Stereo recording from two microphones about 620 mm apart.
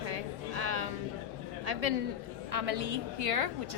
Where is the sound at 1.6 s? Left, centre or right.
Right.